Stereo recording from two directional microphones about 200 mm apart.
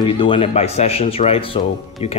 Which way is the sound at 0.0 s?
25° left (ahead or behind).